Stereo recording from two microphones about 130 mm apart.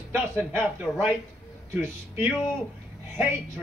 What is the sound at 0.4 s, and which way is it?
Speech, 15° right (ahead or behind).